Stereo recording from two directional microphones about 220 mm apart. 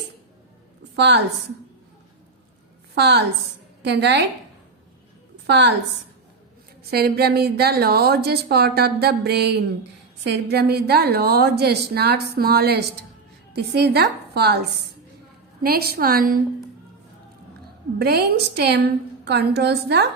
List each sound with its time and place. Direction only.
0.9 s a woman's voice: 50° right (ahead or behind)
2.9 s a woman's voice: 50° right (ahead or behind)
5.5 s a woman's voice: 50° right (ahead or behind)
6.9 s a woman's voice: 45° right (ahead or behind)
15.6 s a woman's voice: 45° right (ahead or behind)
18.0 s a woman's voice: 45° right (ahead or behind)